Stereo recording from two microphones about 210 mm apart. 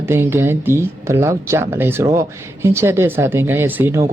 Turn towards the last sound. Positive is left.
turn(degrees=-10)  # may be behind; listen again after turning